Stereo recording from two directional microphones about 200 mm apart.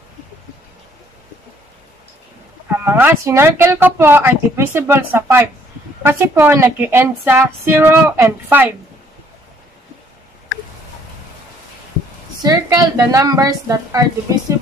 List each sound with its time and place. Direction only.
2.8 s speech: 10° right (ahead or behind)
12.4 s speech: 15° right (ahead or behind)